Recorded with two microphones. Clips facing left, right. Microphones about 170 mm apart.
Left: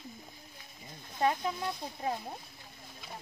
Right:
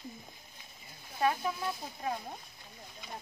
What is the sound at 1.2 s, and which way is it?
Speech, 25° left (ahead or behind).